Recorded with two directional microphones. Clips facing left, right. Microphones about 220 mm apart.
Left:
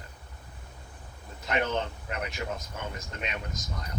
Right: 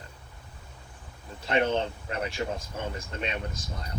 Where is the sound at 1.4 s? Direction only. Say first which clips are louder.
Right 4 dB; 30° right (ahead or behind).